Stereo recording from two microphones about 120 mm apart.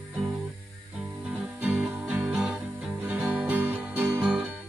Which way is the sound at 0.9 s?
10° right (ahead or behind).